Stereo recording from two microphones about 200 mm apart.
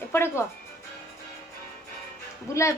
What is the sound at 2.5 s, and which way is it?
Speech, 15° left (ahead or behind).